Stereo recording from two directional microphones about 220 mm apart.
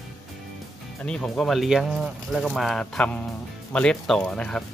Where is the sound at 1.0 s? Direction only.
5° left (ahead or behind).